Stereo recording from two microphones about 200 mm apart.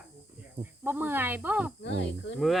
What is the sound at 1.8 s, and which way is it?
Speech, 65° left (ahead or behind).